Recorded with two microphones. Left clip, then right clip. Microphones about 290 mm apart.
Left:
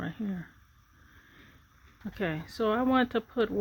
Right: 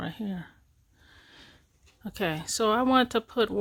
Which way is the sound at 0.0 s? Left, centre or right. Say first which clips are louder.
Right 1 dB; right.